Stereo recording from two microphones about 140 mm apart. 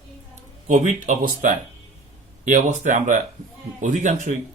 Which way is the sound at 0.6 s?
60° right (ahead or behind).